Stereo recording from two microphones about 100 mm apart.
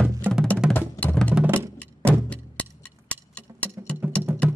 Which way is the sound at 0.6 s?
10° right (ahead or behind).